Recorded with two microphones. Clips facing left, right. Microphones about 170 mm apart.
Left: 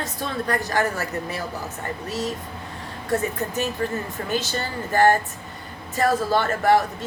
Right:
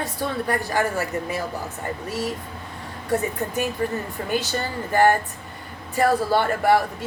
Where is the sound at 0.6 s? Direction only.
40° left (ahead or behind).